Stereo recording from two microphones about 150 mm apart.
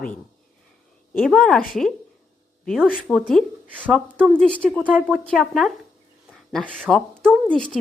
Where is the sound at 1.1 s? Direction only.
5° left (ahead or behind).